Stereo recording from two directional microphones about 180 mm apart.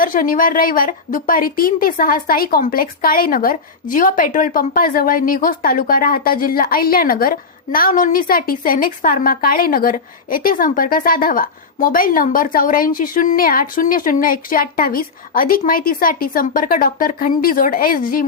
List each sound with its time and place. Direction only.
0.0 s a woman's voice: 50° left (ahead or behind)